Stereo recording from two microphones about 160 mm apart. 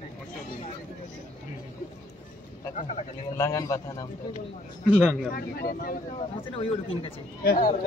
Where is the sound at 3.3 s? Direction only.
20° left (ahead or behind).